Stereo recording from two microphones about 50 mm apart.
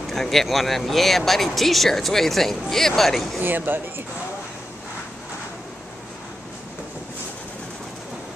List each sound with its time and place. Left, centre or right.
0.1 s speech: centre
3.3 s speech: right